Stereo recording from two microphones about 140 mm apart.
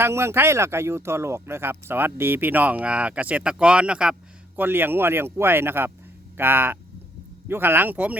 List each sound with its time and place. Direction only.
0.0 s speech: 20° right (ahead or behind)